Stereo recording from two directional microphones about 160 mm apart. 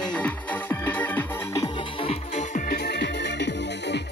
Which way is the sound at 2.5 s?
75° left (ahead or behind).